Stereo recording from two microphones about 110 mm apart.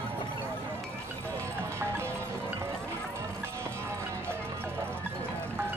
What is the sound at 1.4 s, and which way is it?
Music, 25° right (ahead or behind).